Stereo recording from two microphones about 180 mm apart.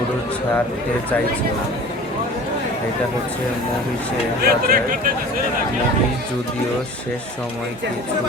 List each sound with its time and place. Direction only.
4.4 s speech: 55° right (ahead or behind)